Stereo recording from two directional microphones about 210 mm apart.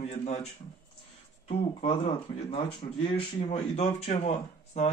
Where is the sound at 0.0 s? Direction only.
30° left (ahead or behind).